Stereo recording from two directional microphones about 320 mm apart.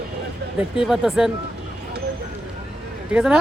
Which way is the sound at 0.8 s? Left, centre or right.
Centre.